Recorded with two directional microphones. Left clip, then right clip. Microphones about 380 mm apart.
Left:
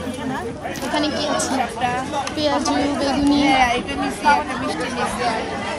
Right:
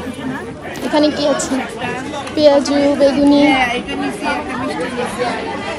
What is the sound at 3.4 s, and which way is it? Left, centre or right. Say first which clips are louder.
Speech: right 3 dB; left.